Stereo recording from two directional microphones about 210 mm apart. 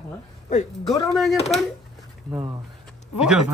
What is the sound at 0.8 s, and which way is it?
Speech, 15° left (ahead or behind).